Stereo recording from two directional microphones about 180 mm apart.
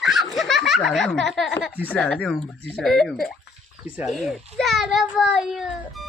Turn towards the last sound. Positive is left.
turn(degrees=0)  # may be behind; listen again after turning